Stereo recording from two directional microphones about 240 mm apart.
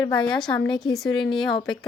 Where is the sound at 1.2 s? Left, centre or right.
Centre.